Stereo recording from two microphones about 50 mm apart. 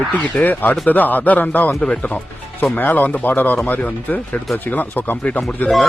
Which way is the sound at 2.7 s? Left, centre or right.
Left.